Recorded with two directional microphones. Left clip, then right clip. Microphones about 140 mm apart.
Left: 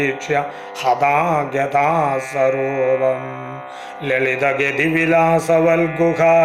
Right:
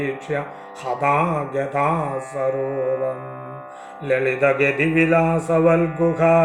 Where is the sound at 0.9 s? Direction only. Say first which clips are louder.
Left 4 dB; 5° left (ahead or behind).